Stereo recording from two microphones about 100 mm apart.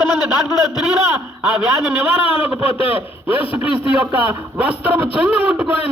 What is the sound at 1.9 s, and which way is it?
A man's voice, 20° right (ahead or behind).